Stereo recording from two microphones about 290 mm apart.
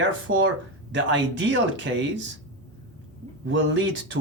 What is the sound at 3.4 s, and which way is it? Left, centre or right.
Speech, right.